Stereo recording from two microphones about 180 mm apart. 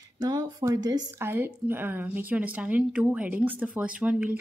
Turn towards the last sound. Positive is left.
turn(degrees=-10)  # may be behind; listen again after turning